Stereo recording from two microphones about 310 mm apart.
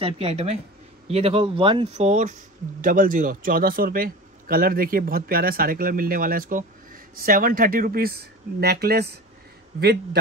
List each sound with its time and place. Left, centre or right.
0.0 s a man's voice: centre